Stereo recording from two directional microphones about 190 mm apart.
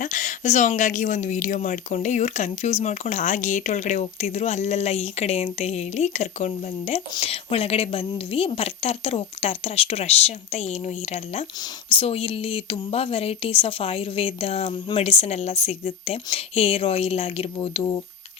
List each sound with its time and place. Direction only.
0.0 s speech: 40° left (ahead or behind)